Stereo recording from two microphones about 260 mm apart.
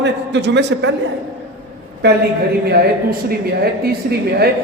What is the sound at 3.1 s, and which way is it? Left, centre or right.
Speech, right.